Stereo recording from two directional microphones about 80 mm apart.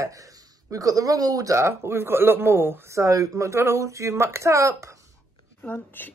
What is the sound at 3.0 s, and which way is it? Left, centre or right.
Speech, right.